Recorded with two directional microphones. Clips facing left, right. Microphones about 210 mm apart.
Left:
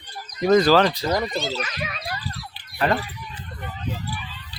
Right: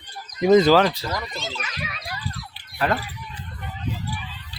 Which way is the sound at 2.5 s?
5° right (ahead or behind).